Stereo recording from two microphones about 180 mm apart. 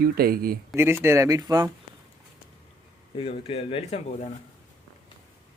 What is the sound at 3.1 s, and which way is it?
Speech, 30° left (ahead or behind).